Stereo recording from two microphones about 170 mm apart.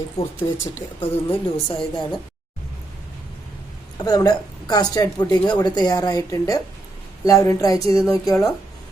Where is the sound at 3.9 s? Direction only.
20° left (ahead or behind).